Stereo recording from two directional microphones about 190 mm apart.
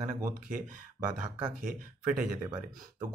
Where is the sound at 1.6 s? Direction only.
45° right (ahead or behind).